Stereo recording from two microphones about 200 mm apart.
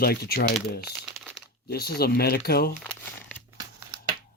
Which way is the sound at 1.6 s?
55° left (ahead or behind).